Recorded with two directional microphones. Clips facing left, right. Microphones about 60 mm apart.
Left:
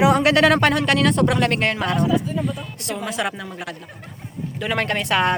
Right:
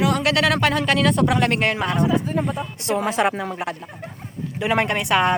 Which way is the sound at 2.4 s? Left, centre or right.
Right.